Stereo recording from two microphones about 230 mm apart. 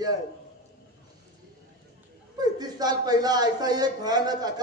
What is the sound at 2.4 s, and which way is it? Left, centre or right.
A woman's voice, centre.